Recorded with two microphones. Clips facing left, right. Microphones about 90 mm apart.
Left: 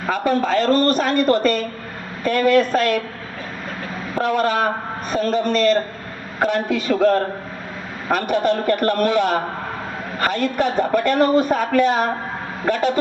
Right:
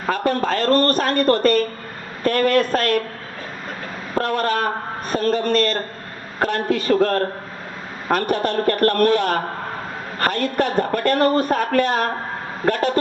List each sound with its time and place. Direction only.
0.1 s speech: 45° right (ahead or behind)
0.7 s a man's voice: 5° left (ahead or behind)
0.9 s speech: 45° right (ahead or behind)
4.3 s speech: 45° right (ahead or behind)